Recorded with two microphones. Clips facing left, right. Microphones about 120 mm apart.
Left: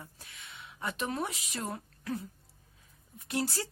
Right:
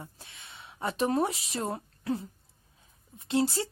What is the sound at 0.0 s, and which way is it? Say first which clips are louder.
A woman's voice: right 3 dB; 25° right (ahead or behind).